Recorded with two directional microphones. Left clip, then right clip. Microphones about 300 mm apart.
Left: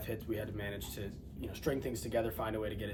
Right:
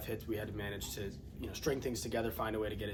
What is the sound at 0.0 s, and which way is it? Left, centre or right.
Speech, centre.